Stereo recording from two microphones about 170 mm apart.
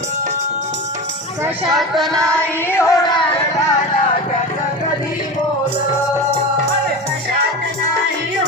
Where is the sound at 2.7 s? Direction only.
15° left (ahead or behind).